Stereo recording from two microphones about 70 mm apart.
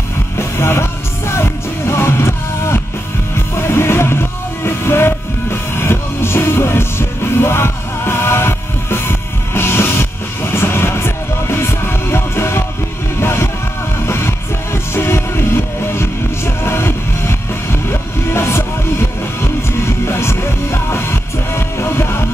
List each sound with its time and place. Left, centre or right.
0.4 s music: left
20.1 s music: left